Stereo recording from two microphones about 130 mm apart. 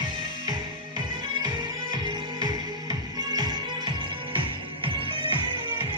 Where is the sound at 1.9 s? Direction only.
30° right (ahead or behind).